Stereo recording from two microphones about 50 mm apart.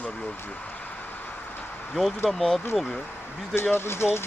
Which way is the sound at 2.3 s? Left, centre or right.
Centre.